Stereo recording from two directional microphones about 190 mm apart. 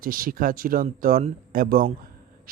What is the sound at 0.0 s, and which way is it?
Speech, 50° right (ahead or behind).